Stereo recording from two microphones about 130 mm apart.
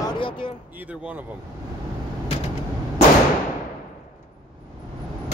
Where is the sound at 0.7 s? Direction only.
10° right (ahead or behind).